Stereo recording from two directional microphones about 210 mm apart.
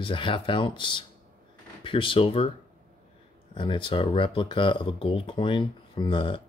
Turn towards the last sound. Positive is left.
turn(degrees=25)  # may be behind; listen again after turning